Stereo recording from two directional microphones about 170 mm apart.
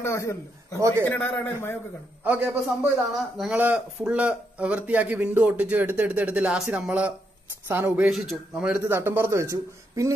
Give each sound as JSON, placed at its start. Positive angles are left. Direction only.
{"t": 0.0, "sound": "a man's voice", "side_deg": 15}
{"t": 0.7, "sound": "speech", "side_deg": -15}
{"t": 1.0, "sound": "a man's voice", "side_deg": 10}
{"t": 2.2, "sound": "speech", "side_deg": -10}